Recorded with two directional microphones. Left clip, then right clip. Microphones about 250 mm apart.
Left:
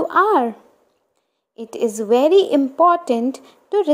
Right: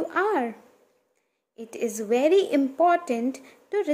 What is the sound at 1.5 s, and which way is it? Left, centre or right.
A woman's voice, centre.